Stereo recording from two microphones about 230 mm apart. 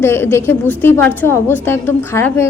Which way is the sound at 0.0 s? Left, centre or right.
Centre.